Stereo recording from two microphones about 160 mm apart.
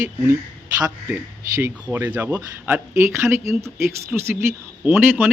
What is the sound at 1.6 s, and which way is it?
A man's voice, 15° right (ahead or behind).